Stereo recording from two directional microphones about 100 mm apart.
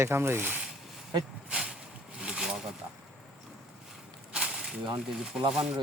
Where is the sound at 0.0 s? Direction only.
25° right (ahead or behind).